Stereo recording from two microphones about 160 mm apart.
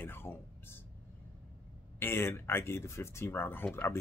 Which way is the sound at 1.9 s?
15° left (ahead or behind).